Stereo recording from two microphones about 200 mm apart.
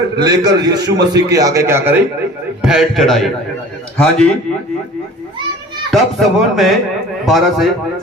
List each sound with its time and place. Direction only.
0.2 s a man's voice: 20° right (ahead or behind); by 4.3 s 5° left (ahead or behind)
5.9 s speech: centre (ahead or behind)